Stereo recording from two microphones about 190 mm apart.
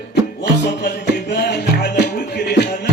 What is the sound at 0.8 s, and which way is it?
Music, 60° left (ahead or behind).